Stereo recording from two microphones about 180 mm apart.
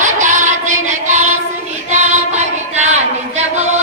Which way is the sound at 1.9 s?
40° right (ahead or behind).